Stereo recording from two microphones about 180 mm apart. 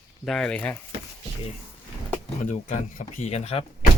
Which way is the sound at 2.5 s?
40° left (ahead or behind).